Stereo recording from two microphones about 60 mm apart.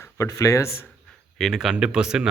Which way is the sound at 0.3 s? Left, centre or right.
Left.